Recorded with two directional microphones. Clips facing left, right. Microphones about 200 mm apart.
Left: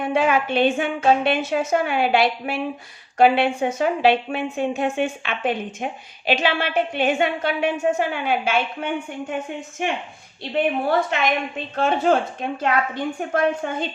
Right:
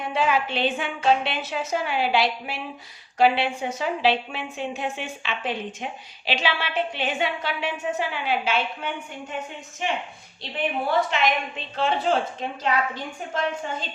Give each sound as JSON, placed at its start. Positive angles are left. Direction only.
{"t": 0.0, "sound": "a woman's voice", "side_deg": 55}
{"t": 11.1, "sound": "a woman's voice", "side_deg": 50}